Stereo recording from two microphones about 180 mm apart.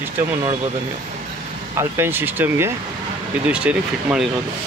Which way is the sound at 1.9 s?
10° right (ahead or behind).